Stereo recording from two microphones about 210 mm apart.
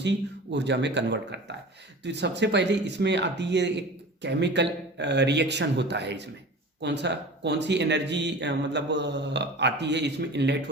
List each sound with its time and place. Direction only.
0.0 s speech: 55° right (ahead or behind)